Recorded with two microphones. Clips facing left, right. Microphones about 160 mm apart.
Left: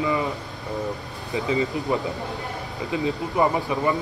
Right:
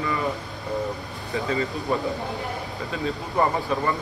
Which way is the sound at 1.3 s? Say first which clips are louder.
Left 2 dB; 20° left (ahead or behind).